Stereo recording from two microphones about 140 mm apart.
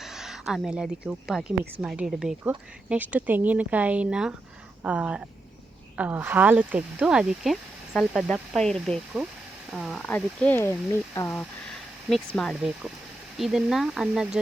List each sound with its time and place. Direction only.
0.0 s speech: 5° right (ahead or behind)
10.1 s speech: 15° left (ahead or behind)
12.0 s speech: 5° left (ahead or behind)
12.5 s speech: 5° right (ahead or behind)